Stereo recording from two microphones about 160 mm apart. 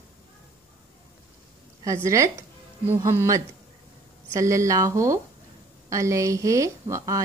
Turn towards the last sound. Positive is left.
turn(degrees=-20)  # may be behind; listen again after turning